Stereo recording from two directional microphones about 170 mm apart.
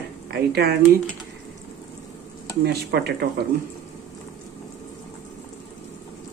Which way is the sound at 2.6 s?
70° right (ahead or behind).